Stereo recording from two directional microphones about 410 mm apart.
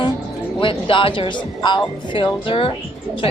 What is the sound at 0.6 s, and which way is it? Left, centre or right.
A woman's voice, centre.